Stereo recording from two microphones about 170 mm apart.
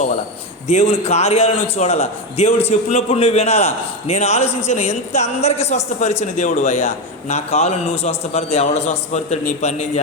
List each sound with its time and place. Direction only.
0.7 s a man's voice: 40° left (ahead or behind)